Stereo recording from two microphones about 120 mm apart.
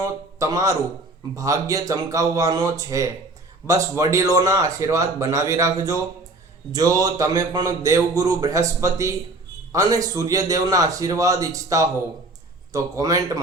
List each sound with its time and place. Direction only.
0.0 s a man's voice: 25° right (ahead or behind)